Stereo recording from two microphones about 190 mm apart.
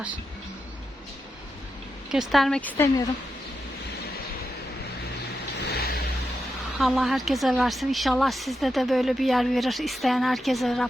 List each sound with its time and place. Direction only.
2.0 s speech: centre (ahead or behind)
5.5 s vehicle: 55° left (ahead or behind)
6.7 s speech: centre (ahead or behind)